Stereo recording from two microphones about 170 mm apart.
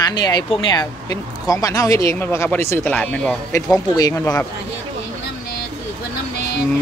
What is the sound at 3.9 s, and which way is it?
Speech, 20° left (ahead or behind).